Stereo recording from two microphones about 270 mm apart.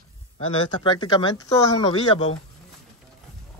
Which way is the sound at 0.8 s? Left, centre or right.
Centre.